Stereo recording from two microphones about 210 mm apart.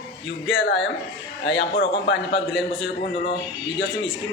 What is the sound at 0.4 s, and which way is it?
Speech, 55° left (ahead or behind).